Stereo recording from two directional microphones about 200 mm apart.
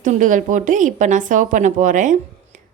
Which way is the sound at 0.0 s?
40° right (ahead or behind).